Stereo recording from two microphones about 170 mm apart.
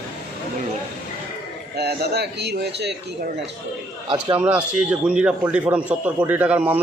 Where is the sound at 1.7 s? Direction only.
70° right (ahead or behind).